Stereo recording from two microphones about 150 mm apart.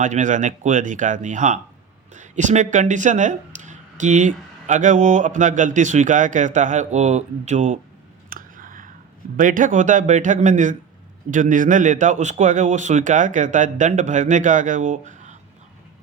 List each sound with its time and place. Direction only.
0.0 s speech: 55° right (ahead or behind)
8.3 s a sound: 65° right (ahead or behind)
9.4 s speech: 60° right (ahead or behind)